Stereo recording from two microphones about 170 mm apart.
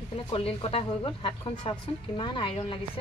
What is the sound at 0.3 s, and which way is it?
A woman's voice, 35° left (ahead or behind).